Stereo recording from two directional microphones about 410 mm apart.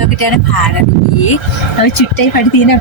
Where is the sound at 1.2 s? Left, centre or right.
Left.